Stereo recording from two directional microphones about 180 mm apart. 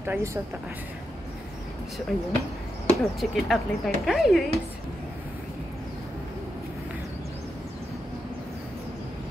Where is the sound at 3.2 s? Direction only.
Centre (ahead or behind).